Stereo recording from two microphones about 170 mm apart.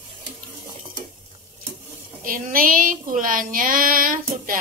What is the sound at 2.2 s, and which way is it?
Child singing, 55° right (ahead or behind).